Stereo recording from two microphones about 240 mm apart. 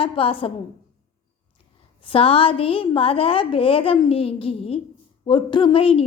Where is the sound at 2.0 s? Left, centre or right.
Left.